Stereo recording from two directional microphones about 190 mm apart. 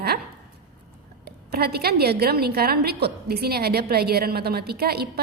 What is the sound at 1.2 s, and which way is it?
A woman's voice, 55° right (ahead or behind).